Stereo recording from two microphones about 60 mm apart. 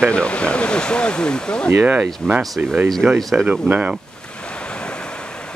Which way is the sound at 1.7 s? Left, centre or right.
Right.